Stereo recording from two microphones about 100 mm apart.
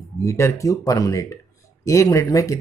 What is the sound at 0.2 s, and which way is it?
Speech, 30° left (ahead or behind).